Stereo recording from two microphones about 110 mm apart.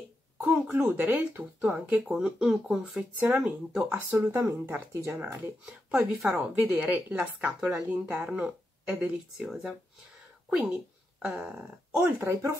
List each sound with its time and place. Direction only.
0.5 s speech: 20° right (ahead or behind)
5.7 s speech: 5° right (ahead or behind)
12.2 s speech: 25° right (ahead or behind)